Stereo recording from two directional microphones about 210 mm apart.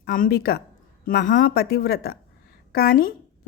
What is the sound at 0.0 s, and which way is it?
A woman's voice, 45° left (ahead or behind).